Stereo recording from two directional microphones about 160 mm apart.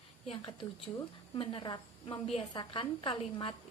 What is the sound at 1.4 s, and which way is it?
A woman's voice, 30° left (ahead or behind).